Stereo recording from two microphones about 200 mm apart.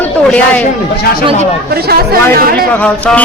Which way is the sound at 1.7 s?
50° right (ahead or behind).